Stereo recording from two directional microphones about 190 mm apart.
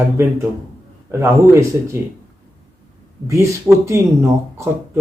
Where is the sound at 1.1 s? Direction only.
15° right (ahead or behind).